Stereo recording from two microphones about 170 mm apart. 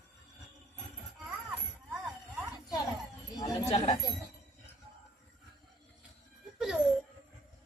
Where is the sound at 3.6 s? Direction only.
35° left (ahead or behind).